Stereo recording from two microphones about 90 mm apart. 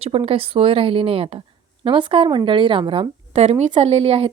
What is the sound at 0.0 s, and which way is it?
A woman's voice, 90° right.